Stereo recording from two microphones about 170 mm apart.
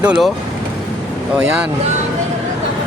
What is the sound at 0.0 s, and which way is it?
Speech, 5° right (ahead or behind).